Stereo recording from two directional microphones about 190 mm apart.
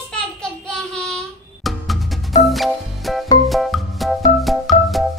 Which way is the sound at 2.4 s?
Centre (ahead or behind).